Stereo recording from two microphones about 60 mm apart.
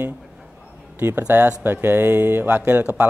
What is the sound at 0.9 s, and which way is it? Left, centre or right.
Speech, right.